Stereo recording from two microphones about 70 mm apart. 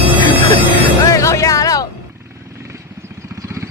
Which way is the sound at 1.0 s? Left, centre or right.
Left.